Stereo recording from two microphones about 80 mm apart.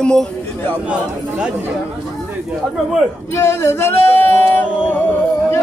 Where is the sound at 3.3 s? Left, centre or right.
Left.